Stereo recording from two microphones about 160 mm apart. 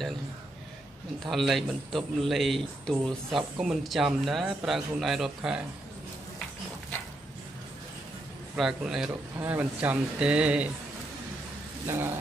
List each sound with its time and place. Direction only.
1.2 s a man's voice: centre (ahead or behind)
8.5 s a man's voice: 5° right (ahead or behind)
11.8 s speech: 15° right (ahead or behind)